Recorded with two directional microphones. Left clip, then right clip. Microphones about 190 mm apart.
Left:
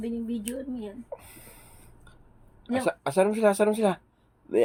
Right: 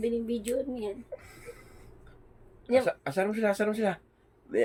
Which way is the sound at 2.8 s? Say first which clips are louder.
Left 5 dB; 30° left (ahead or behind).